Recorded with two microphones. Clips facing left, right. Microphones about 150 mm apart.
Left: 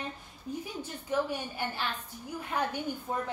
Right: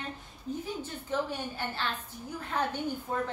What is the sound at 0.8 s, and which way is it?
A woman's voice, 10° left (ahead or behind).